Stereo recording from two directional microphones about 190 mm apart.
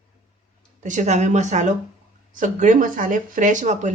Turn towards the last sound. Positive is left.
turn(degrees=-40)  # may be behind; listen again after turning